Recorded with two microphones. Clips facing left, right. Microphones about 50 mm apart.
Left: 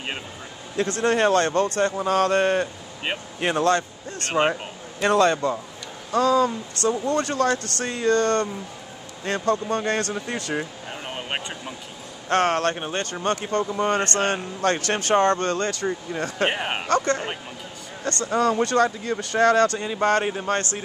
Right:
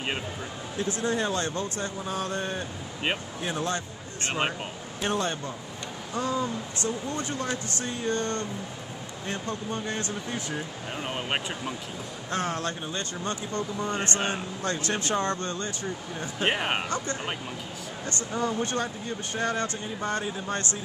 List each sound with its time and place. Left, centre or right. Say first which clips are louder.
1.0 s speech: left 10 dB; left
5.0 s speech: left 10 dB; left
11.1 s speech: even; centre
12.3 s speech: left 9 dB; left
16.4 s speech: right 1 dB; centre
16.9 s speech: left 9 dB; left
18.2 s speech: left 8 dB; left